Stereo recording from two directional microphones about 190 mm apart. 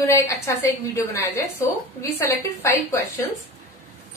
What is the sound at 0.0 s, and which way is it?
A woman's voice, 15° left (ahead or behind).